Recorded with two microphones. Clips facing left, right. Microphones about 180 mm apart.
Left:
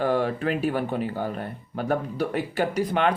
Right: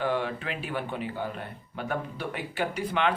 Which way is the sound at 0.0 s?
40° left (ahead or behind).